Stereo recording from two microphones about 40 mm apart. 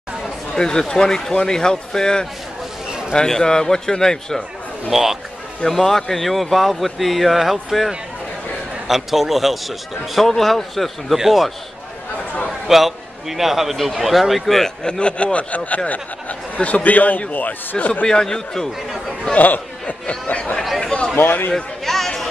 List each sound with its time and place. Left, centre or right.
0.6 s speech: centre
4.9 s a man's voice: centre
5.7 s speech: centre
11.1 s a man's voice: centre
12.6 s speech: centre
14.8 s speech: left
18.0 s speech: centre
19.3 s chatter: left
20.1 s speech: left
20.8 s a sound: left
21.2 s a man's voice: left
21.8 s a sound: centre